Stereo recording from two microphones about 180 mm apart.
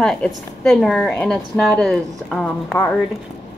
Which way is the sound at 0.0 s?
5° left (ahead or behind).